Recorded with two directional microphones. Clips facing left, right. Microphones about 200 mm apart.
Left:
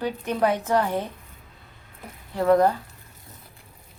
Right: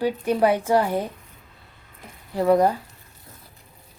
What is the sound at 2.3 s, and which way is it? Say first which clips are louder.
Speech: right 1 dB; 10° right (ahead or behind).